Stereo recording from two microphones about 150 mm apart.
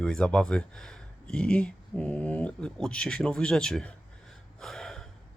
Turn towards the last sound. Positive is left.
turn(degrees=5)  # may be behind; listen again after turning